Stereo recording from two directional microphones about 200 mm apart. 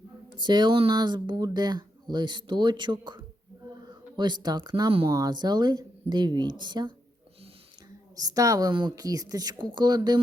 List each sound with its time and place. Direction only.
0.3 s speech: 20° right (ahead or behind)
5.0 s speech: 15° right (ahead or behind)
8.1 s speech: 20° right (ahead or behind)